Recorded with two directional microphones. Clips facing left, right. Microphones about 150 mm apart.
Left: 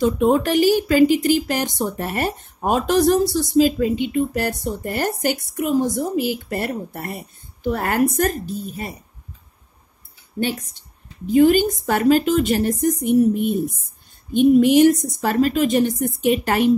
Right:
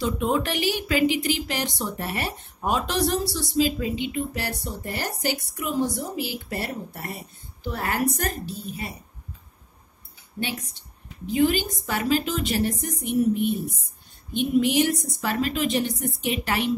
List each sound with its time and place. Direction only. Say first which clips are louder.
0.0 s speech: left 7 dB; 45° left (ahead or behind)
10.4 s speech: left 7 dB; 45° left (ahead or behind)